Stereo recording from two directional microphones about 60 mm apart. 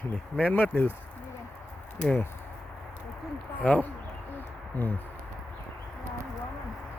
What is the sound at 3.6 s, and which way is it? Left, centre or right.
Speech, left.